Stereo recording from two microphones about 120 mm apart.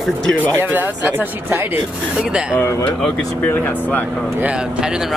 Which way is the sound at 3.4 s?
15° left (ahead or behind).